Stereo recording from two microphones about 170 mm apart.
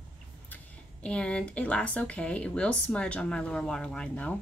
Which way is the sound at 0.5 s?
10° left (ahead or behind).